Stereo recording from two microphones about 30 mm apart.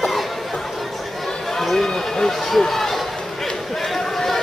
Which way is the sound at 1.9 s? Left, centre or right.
Centre.